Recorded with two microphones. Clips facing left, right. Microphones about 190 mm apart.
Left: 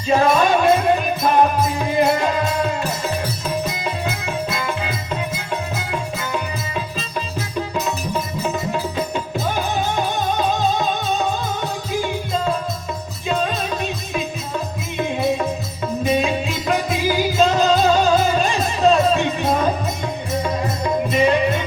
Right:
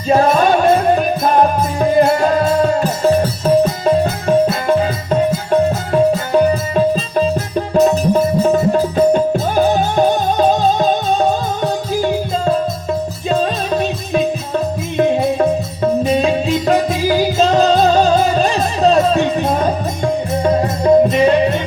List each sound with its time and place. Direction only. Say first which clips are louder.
0.1 s music: right 4 dB; 40° right (ahead or behind)
8.4 s music: right 10 dB; 45° right (ahead or behind)
13.3 s music: right 5 dB; 35° right (ahead or behind)
16.6 s music: right 4 dB; 35° right (ahead or behind)